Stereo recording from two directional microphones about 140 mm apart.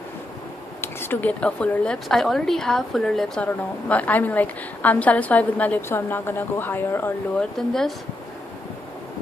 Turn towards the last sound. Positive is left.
turn(degrees=0)  # may be behind; listen again after turning